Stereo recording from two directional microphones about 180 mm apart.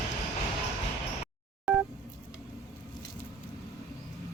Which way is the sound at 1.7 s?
5° right (ahead or behind).